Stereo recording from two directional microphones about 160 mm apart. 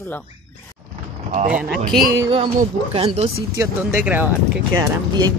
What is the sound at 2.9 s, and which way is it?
Speech, 40° right (ahead or behind).